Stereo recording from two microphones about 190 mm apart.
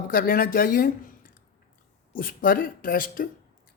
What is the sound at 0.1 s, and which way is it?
Speech, 50° left (ahead or behind).